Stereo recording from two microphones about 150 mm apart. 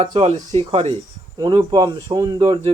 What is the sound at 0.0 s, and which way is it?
Speech, 40° right (ahead or behind).